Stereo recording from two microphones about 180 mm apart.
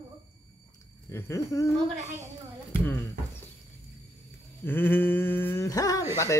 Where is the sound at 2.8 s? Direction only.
10° left (ahead or behind).